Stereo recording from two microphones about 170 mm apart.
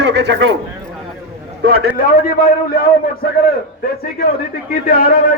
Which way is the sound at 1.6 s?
65° right (ahead or behind).